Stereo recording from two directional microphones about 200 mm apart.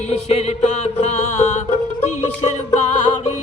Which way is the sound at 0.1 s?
30° left (ahead or behind).